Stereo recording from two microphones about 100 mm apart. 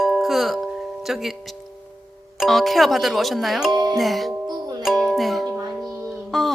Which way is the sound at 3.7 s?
45° right (ahead or behind).